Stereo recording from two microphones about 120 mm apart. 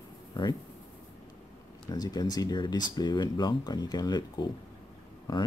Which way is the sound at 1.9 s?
35° left (ahead or behind).